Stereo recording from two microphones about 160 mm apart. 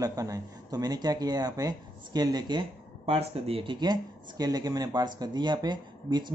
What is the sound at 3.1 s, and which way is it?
Speech, 40° right (ahead or behind).